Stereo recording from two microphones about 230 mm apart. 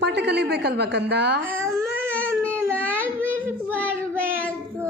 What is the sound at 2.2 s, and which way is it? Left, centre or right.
Baby cry, centre.